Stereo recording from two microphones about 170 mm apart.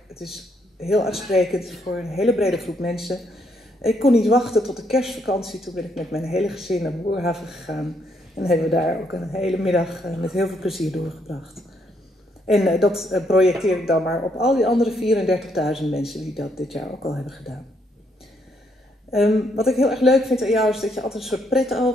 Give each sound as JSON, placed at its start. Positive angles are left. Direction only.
{"t": 0.2, "sound": "a man's voice", "side_deg": 0}
{"t": 19.1, "sound": "a woman's voice", "side_deg": 0}